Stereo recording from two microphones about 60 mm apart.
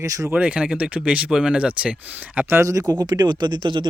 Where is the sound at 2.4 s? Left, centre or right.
Right.